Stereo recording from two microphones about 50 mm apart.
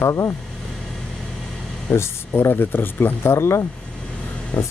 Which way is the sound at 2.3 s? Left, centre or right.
Left.